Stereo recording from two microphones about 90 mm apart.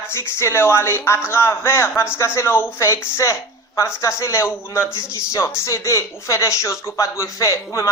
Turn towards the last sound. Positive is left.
turn(degrees=35)  # may be behind; listen again after turning